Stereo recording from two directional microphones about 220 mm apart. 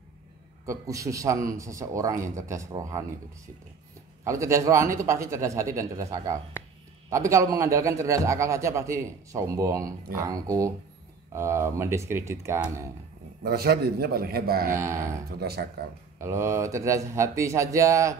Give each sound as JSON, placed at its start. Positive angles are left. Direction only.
{"t": 0.7, "sound": "a man's voice", "side_deg": -15}
{"t": 4.2, "sound": "a man's voice", "side_deg": -15}
{"t": 13.4, "sound": "a man's voice", "side_deg": -45}
{"t": 14.7, "sound": "a man's voice", "side_deg": -15}
{"t": 15.2, "sound": "a man's voice", "side_deg": -45}
{"t": 16.2, "sound": "a man's voice", "side_deg": -15}